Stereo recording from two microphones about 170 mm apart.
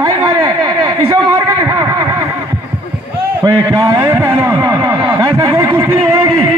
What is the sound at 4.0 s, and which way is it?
Speech, 15° right (ahead or behind).